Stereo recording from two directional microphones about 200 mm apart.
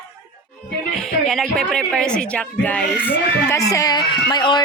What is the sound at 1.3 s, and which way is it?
Speech, centre (ahead or behind).